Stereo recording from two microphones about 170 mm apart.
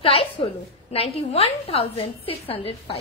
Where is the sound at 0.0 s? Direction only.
35° left (ahead or behind).